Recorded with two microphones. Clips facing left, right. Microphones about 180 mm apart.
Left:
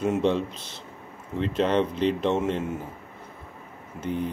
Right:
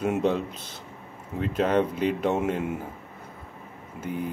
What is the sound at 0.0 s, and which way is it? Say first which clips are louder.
Speech: left 1 dB; 5° right (ahead or behind).